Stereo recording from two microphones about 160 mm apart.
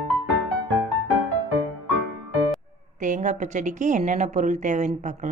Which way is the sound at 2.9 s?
50° right (ahead or behind).